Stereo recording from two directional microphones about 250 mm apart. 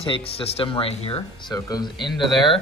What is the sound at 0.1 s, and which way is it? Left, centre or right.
Speech, left.